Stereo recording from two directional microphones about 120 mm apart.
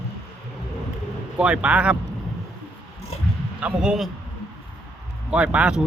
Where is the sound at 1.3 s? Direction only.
10° right (ahead or behind).